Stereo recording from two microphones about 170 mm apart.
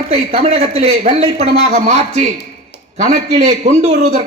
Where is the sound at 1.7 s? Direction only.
50° right (ahead or behind).